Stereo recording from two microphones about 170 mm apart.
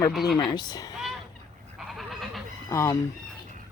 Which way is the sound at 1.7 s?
Centre (ahead or behind).